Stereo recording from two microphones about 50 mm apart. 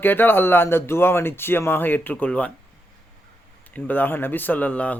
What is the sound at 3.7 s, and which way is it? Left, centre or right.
Speech, left.